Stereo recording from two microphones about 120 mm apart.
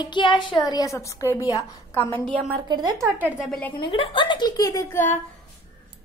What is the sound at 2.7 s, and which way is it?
Speech, 35° right (ahead or behind).